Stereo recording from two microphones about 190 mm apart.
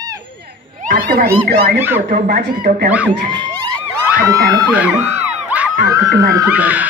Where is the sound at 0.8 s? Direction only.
50° right (ahead or behind).